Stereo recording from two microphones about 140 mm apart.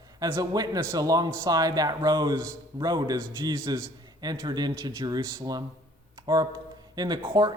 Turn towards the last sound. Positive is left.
turn(degrees=-30)  # may be behind; listen again after turning